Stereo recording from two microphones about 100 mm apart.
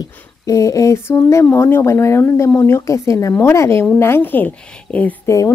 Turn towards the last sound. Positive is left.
turn(degrees=35)  # may be behind; listen again after turning